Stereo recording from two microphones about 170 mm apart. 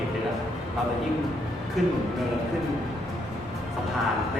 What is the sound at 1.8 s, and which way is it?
Speech, centre (ahead or behind).